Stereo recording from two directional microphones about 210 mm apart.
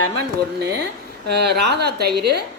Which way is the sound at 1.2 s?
50° right (ahead or behind).